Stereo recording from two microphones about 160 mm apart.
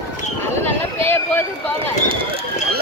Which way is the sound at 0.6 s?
15° left (ahead or behind).